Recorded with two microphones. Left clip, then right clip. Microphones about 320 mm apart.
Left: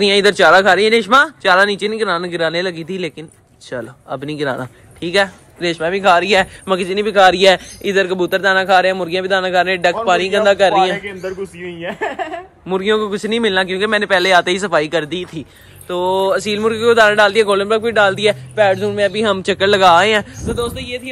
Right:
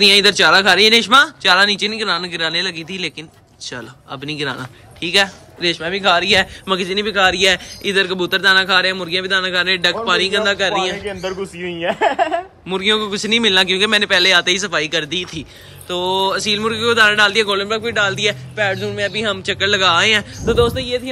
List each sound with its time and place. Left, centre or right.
0.0 s speech: centre
11.2 s speech: right
12.6 s speech: centre
20.4 s speech: right
20.8 s music: centre